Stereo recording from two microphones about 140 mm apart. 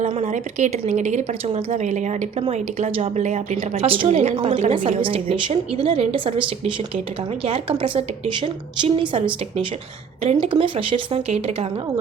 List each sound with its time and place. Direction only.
0.1 s a woman's voice: 55° right (ahead or behind)
3.8 s a woman's voice: 40° right (ahead or behind)
4.7 s a woman's voice: 40° right (ahead or behind)